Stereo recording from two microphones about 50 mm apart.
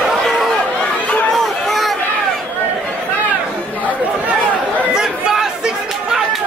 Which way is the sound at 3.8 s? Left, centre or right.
Right.